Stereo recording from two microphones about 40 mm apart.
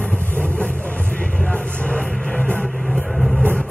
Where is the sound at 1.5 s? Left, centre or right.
Left.